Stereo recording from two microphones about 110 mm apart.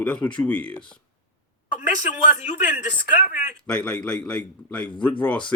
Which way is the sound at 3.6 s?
10° left (ahead or behind).